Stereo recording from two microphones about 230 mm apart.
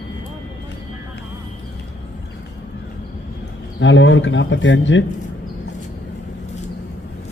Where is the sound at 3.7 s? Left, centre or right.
Left.